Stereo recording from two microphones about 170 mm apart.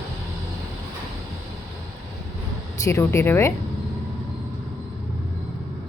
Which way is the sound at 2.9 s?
15° left (ahead or behind).